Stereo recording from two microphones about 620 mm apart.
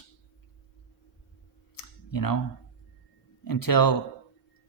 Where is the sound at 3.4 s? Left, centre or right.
Left.